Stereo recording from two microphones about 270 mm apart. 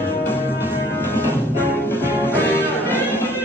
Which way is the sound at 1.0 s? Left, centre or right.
Centre.